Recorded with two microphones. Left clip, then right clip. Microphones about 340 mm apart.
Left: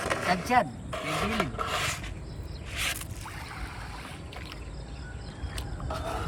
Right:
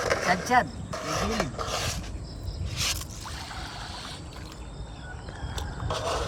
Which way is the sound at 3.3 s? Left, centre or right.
Right.